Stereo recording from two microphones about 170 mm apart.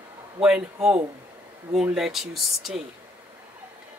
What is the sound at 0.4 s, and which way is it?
Speech, 5° right (ahead or behind).